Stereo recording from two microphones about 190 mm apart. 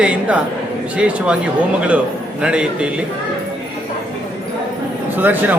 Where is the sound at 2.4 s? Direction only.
5° right (ahead or behind).